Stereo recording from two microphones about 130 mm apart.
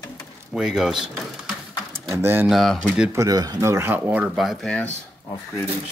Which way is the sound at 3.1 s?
30° right (ahead or behind).